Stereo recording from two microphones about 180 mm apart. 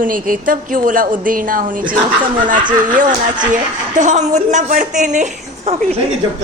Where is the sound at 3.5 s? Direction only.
45° right (ahead or behind).